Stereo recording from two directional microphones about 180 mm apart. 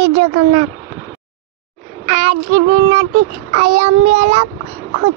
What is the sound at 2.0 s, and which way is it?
Child singing, 40° right (ahead or behind).